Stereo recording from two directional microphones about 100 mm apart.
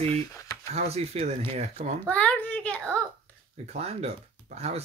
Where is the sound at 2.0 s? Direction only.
15° left (ahead or behind).